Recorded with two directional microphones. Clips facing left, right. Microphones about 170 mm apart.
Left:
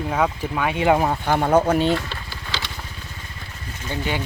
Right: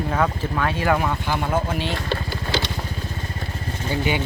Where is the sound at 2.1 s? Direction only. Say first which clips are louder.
Right 8 dB; 55° right (ahead or behind).